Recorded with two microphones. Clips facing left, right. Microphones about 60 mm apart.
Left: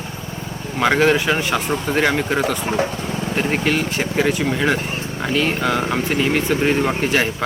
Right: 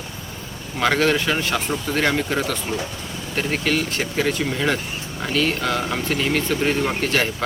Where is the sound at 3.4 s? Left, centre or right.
Centre.